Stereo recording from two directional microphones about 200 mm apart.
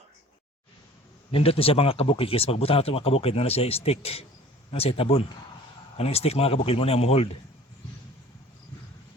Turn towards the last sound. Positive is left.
turn(degrees=30)  # may be behind; listen again after turning